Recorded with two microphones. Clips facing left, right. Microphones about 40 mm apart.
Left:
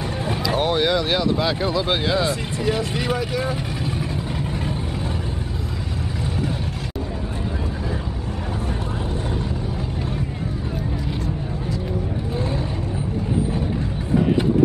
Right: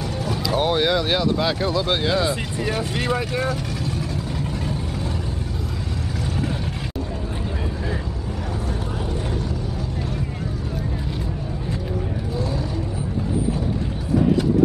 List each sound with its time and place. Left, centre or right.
0.2 s vehicle: left
0.6 s speech: centre